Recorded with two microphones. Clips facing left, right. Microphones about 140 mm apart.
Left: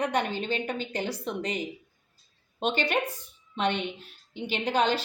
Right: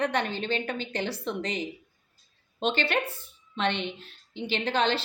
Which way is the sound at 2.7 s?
15° left (ahead or behind).